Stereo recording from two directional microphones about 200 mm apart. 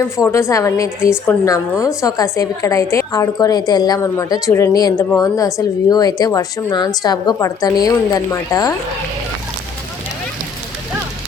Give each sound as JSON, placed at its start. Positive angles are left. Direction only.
{"t": 0.2, "sound": "a woman's voice", "side_deg": 15}